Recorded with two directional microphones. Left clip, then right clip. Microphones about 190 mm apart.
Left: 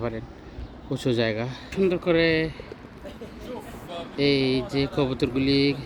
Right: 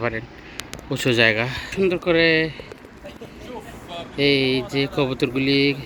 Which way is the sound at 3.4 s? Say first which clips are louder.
Right 1 dB; 55° left (ahead or behind).